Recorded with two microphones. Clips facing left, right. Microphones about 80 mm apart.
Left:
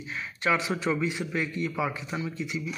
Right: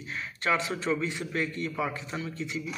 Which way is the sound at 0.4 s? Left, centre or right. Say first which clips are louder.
Left 2 dB; centre.